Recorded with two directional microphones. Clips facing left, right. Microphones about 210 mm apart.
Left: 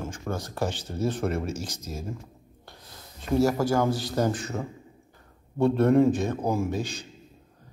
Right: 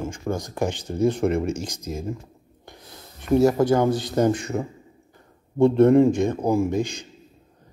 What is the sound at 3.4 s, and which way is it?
A man's voice, 20° right (ahead or behind).